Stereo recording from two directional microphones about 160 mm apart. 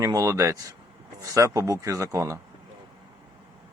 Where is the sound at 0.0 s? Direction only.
20° right (ahead or behind).